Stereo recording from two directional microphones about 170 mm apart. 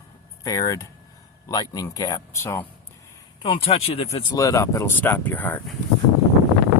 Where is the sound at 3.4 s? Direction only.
30° left (ahead or behind).